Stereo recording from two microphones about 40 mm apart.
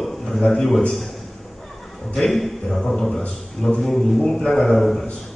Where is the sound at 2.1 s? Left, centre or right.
Centre.